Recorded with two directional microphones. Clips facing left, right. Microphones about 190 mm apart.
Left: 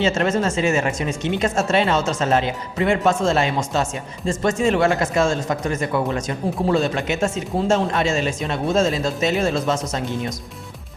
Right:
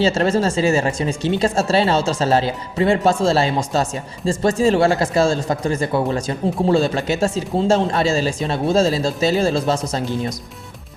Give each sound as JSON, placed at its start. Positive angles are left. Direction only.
{"t": 0.0, "sound": "speech", "side_deg": -35}